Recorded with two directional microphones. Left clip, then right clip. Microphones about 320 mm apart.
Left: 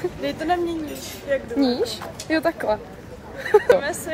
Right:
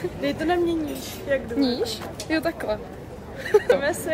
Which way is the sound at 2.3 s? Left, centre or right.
Centre.